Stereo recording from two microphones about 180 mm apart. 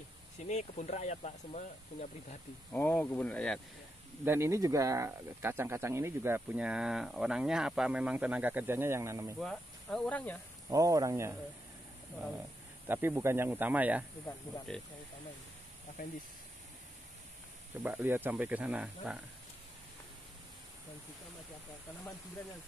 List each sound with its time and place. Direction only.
0.4 s speech: 40° left (ahead or behind)
2.7 s speech: 10° left (ahead or behind)
4.2 s speech: 15° right (ahead or behind)
9.4 s speech: centre (ahead or behind)
10.7 s speech: 20° right (ahead or behind)
12.8 s speech: 10° right (ahead or behind)
17.8 s speech: 10° right (ahead or behind)